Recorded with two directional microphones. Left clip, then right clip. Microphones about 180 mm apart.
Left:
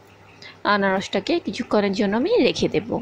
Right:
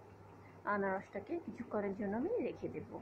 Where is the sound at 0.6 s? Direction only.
80° left.